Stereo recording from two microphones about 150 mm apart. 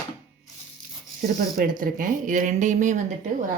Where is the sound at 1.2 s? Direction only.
65° right (ahead or behind).